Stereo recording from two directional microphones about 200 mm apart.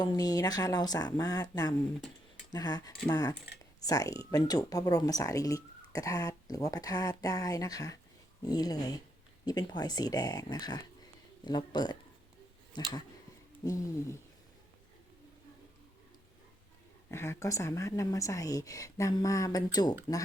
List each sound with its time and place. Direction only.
0.0 s speech: 20° left (ahead or behind)
17.1 s speech: 10° left (ahead or behind)